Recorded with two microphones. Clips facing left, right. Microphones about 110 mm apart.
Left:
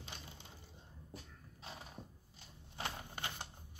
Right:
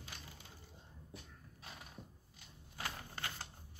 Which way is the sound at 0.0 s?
25° left (ahead or behind).